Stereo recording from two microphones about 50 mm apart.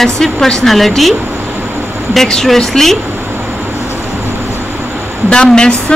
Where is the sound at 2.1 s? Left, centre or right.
Centre.